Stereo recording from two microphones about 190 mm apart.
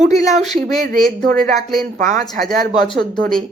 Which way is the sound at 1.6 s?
Centre (ahead or behind).